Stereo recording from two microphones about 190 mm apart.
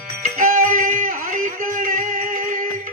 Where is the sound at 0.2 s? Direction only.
45° right (ahead or behind).